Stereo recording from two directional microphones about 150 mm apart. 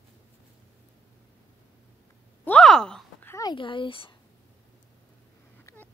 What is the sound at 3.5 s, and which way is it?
Speech, 35° left (ahead or behind).